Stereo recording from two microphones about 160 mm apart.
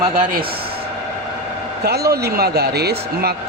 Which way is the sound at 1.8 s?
85° right.